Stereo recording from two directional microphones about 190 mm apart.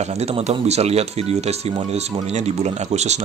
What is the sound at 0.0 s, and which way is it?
Speech, 35° right (ahead or behind).